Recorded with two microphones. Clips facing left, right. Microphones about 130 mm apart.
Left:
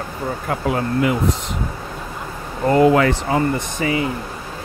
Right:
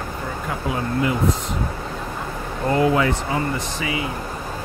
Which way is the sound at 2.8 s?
60° left (ahead or behind).